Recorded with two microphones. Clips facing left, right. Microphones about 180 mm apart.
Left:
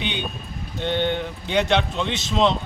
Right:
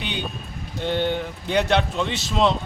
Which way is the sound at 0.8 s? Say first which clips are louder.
Even; 5° right (ahead or behind).